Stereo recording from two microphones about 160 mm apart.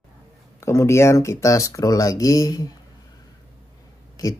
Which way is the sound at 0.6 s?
15° left (ahead or behind).